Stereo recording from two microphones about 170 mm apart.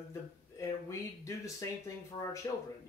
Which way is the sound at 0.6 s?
15° left (ahead or behind).